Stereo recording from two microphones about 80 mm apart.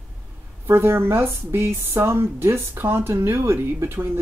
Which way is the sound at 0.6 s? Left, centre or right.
Right.